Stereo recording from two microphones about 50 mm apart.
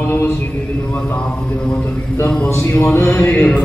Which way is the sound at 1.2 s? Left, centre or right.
Left.